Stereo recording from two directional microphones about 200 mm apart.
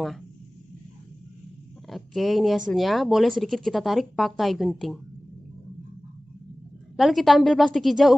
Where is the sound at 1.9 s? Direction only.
Centre (ahead or behind).